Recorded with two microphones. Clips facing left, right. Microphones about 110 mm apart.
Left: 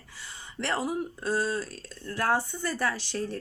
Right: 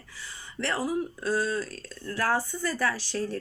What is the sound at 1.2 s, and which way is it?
Speech, 50° left (ahead or behind).